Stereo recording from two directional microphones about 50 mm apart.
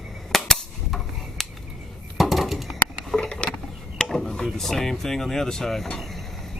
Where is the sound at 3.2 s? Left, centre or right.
Left.